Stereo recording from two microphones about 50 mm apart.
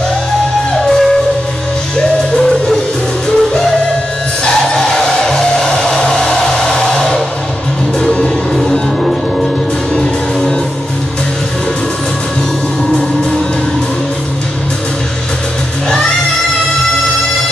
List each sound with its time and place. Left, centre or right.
0.8 s music: centre